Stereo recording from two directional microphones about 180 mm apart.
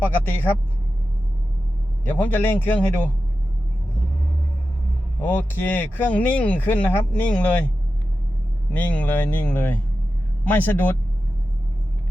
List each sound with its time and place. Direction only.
0.0 s speech: 10° left (ahead or behind)
2.0 s speech: 10° left (ahead or behind)
5.2 s speech: 10° left (ahead or behind)
8.7 s speech: 10° left (ahead or behind)